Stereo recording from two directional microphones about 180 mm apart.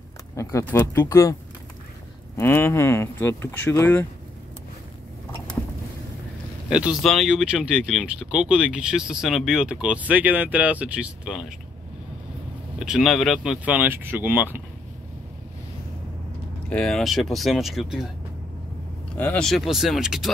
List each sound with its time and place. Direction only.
0.4 s speech: 15° left (ahead or behind)
2.3 s speech: 10° left (ahead or behind)
6.7 s speech: 5° right (ahead or behind)
12.7 s speech: 5° right (ahead or behind)
16.6 s speech: 5° left (ahead or behind)
19.1 s speech: 10° left (ahead or behind)